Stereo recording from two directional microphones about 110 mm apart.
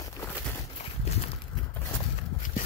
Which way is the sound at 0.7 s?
75° left (ahead or behind).